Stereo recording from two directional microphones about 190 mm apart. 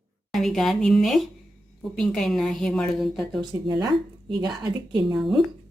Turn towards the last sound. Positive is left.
turn(degrees=0)  # may be behind; listen again after turning